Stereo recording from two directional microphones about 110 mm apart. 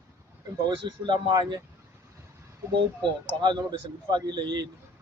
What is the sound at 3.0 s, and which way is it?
Speech, 45° right (ahead or behind).